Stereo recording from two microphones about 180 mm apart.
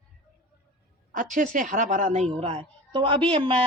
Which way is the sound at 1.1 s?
45° right (ahead or behind).